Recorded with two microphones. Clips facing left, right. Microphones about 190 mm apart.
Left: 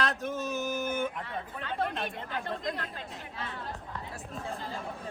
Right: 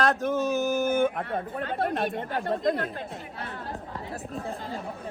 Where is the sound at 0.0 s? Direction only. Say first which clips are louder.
Right 7 dB; 50° right (ahead or behind).